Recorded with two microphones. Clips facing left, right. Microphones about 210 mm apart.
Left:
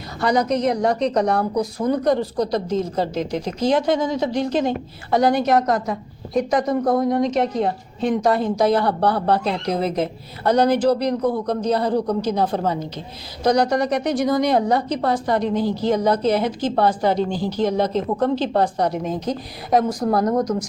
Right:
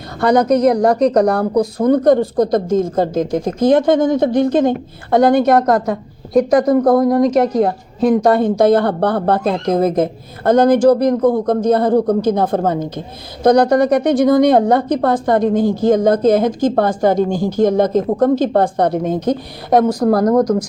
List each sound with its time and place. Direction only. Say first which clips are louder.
0.2 s a woman's voice: right 7 dB; 55° right (ahead or behind)
0.9 s a woman's voice: right 6 dB; 40° right (ahead or behind); by 6.0 s 60° right (ahead or behind)
6.3 s a woman's voice: right 8 dB; 35° right (ahead or behind)
6.7 s speech: right 7 dB; 70° right (ahead or behind)
7.1 s a woman's voice: right 6 dB; 40° right (ahead or behind); by 20.0 s 65° right (ahead or behind)